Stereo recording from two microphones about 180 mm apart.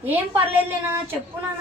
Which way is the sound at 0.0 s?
10° right (ahead or behind).